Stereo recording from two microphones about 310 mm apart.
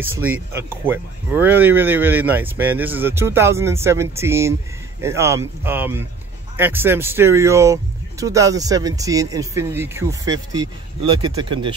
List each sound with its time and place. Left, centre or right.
0.0 s speech: centre